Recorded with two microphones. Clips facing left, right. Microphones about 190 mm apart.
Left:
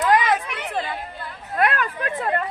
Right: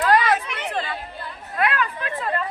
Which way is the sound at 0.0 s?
20° left (ahead or behind).